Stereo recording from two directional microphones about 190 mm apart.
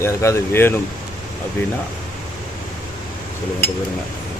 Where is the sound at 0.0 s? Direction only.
15° left (ahead or behind).